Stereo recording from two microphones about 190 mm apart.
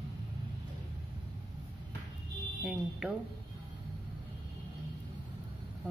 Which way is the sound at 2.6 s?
5° right (ahead or behind).